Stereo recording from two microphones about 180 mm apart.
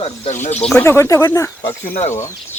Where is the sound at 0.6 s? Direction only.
10° left (ahead or behind).